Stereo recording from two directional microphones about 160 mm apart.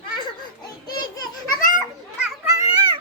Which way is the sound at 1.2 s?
60° left (ahead or behind).